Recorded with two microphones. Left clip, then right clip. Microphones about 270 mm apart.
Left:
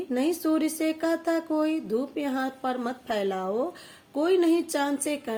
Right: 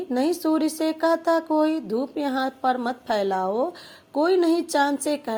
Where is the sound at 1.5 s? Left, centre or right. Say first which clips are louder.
Right 4 dB; centre.